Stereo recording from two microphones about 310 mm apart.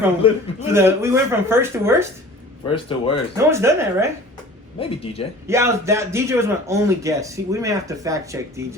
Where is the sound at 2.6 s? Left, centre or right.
Centre.